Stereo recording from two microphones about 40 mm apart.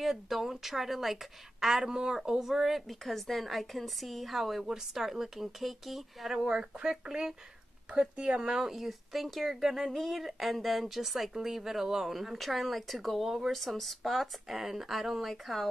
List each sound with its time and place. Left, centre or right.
0.0 s a woman's voice: centre
6.3 s a woman's voice: centre
7.9 s speech: right
8.4 s speech: centre